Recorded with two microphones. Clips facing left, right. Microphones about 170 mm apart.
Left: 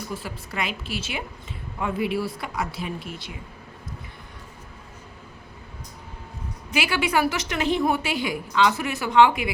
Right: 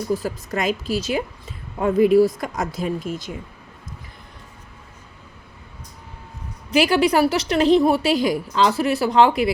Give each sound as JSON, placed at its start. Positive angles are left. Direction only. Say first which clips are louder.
{"t": 0.1, "sound": "a woman's voice", "louder": "right 10 dB", "side_deg": -40}
{"t": 6.7, "sound": "a woman's voice", "louder": "right 8 dB", "side_deg": -35}